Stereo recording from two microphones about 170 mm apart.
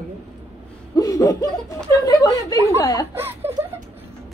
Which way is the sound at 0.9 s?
20° left (ahead or behind).